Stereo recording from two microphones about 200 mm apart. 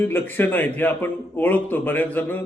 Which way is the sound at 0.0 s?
10° left (ahead or behind).